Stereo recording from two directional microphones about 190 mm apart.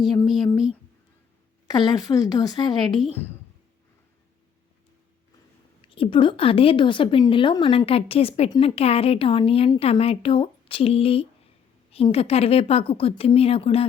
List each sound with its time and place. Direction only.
1.6 s a woman's voice: 20° left (ahead or behind)
5.9 s a woman's voice: 25° left (ahead or behind)